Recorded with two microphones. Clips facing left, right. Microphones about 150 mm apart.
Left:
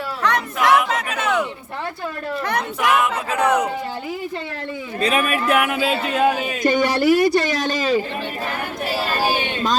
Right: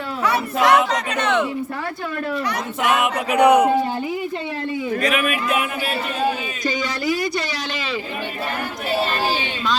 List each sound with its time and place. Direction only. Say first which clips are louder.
0.3 s speech: right 1 dB; 5° right (ahead or behind)
0.9 s a sound: right 1 dB; 5° left (ahead or behind)
2.5 s a man's voice: left 1 dB; 65° left (ahead or behind)
3.0 s speech: right 4 dB; 15° right (ahead or behind)
4.9 s a man's voice: left 3 dB; 30° left (ahead or behind)
5.2 s speech: left 2 dB; 45° left (ahead or behind)
5.5 s a man's voice: left 4 dB; 70° left (ahead or behind); by 8.0 s 45° left (ahead or behind)
8.9 s speech: right 1 dB; 10° left (ahead or behind)